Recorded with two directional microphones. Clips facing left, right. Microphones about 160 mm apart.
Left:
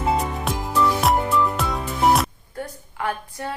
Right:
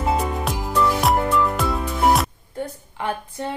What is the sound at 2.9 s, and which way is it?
Speech, 25° right (ahead or behind).